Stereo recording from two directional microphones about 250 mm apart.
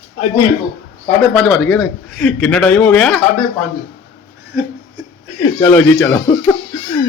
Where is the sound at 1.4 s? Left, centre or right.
Centre.